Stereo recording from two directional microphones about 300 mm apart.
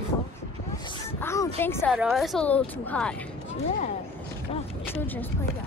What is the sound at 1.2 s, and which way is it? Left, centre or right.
Speech, centre.